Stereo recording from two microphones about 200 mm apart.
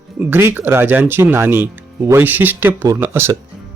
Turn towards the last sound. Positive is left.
turn(degrees=-10)  # may be behind; listen again after turning